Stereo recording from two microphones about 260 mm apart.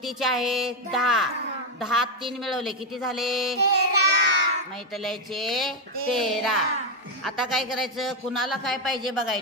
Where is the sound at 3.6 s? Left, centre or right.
Right.